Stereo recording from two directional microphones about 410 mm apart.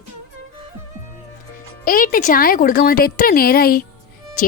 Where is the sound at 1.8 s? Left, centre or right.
Left.